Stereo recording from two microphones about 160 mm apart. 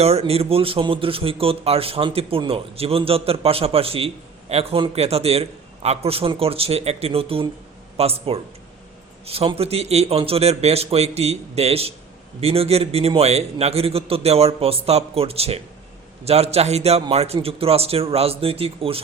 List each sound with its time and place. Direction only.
0.0 s speech: 40° right (ahead or behind)